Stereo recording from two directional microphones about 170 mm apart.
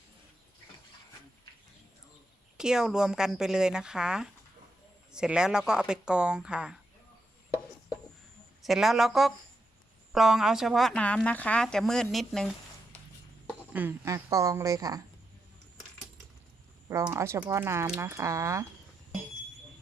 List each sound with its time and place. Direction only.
2.6 s speech: 5° right (ahead or behind)
8.6 s speech: centre (ahead or behind)
13.5 s speech: 10° right (ahead or behind)
17.1 s speech: 15° right (ahead or behind)